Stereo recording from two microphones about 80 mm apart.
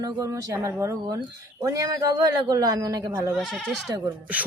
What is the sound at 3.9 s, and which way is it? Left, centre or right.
Speech, right.